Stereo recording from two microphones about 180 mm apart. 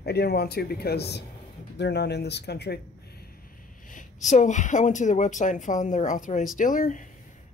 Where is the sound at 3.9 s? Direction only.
40° left (ahead or behind).